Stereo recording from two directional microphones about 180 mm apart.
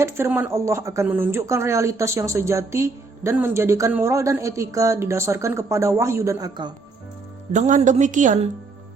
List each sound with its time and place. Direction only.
0.0 s speech: 15° right (ahead or behind)
7.5 s a woman's voice: 40° right (ahead or behind)